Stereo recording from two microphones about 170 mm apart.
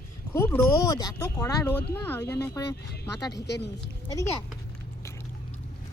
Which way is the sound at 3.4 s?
85° left.